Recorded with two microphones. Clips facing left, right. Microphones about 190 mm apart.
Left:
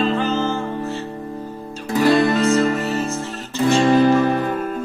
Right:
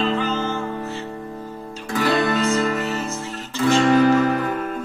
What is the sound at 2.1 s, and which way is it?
Music, 35° left (ahead or behind).